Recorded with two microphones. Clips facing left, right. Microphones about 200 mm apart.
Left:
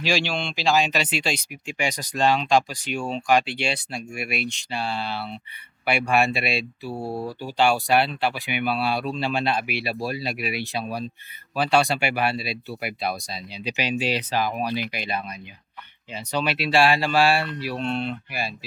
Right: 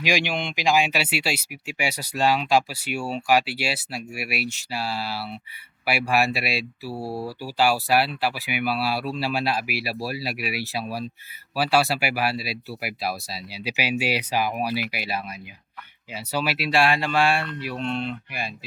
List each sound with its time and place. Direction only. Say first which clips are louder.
0.0 s speech: even; 15° right (ahead or behind); by 17.0 s centre (ahead or behind)
17.2 s speech: left 2 dB; 35° left (ahead or behind)
17.8 s speech: left 1 dB; 5° left (ahead or behind)
18.3 s speech: left 2 dB; 35° left (ahead or behind)